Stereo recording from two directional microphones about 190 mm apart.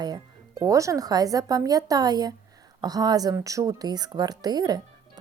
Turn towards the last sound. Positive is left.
turn(degrees=-20)  # may be behind; listen again after turning